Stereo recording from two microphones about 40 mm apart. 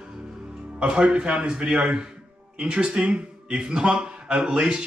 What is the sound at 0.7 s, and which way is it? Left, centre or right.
A man's voice, right.